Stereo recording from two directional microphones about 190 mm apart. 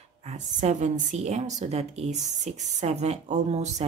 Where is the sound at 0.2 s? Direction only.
35° right (ahead or behind).